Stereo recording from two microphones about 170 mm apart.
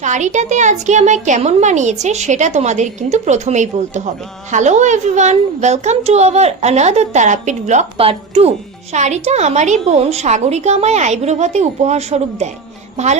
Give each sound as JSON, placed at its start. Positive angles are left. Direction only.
{"t": 0.0, "sound": "a woman's voice", "side_deg": -45}